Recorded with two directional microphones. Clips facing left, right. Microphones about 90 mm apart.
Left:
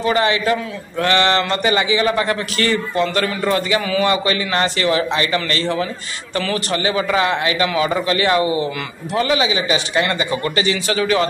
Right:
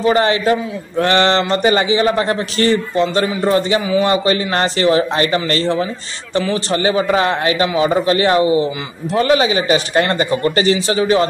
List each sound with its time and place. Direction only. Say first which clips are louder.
0.0 s a man's voice: right 3 dB; 35° right (ahead or behind)
9.1 s a man's voice: right 4 dB; 40° right (ahead or behind)